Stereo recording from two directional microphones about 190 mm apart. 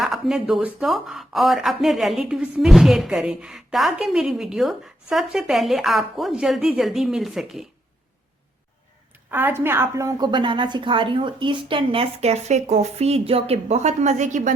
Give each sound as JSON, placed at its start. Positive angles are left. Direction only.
{"t": 0.0, "sound": "speech", "side_deg": 0}
{"t": 9.3, "sound": "a woman's voice", "side_deg": -10}